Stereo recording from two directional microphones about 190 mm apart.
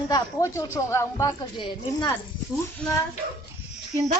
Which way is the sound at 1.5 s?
25° left (ahead or behind).